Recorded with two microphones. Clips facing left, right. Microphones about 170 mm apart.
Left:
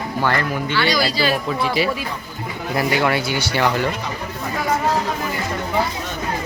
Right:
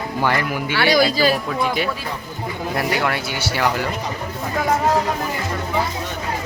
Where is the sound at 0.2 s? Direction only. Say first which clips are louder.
Even; 15° right (ahead or behind).